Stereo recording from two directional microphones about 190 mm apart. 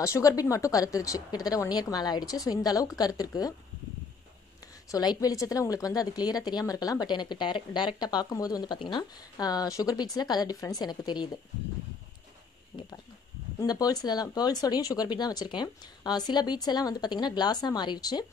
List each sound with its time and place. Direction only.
0.0 s a woman's voice: 15° left (ahead or behind)
4.9 s a woman's voice: 20° left (ahead or behind)
12.7 s a woman's voice: 20° left (ahead or behind)